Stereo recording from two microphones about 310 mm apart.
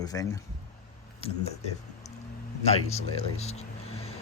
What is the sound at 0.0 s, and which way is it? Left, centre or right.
Speech, centre.